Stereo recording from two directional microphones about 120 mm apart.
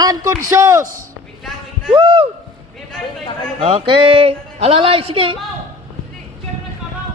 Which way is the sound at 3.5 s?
55° right (ahead or behind).